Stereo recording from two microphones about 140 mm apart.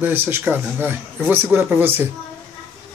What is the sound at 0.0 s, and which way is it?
Speech, 15° right (ahead or behind).